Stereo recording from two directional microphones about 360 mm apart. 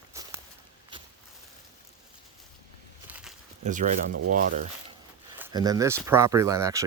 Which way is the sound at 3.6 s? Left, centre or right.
Right.